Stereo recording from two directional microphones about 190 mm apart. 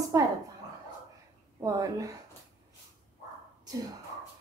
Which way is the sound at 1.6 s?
15° right (ahead or behind).